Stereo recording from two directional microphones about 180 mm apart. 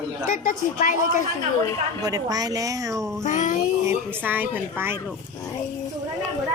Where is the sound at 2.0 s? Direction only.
20° right (ahead or behind).